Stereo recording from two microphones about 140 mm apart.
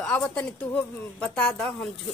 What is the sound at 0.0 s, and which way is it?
A woman's voice, 10° left (ahead or behind).